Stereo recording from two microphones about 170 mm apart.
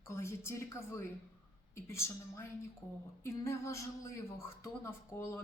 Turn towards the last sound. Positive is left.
turn(degrees=15)  # may be behind; listen again after turning